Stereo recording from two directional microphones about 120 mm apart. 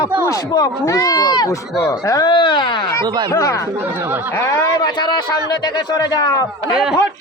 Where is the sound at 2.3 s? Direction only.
40° left (ahead or behind).